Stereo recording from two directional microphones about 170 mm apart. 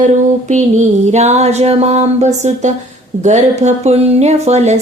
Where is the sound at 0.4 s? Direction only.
45° right (ahead or behind).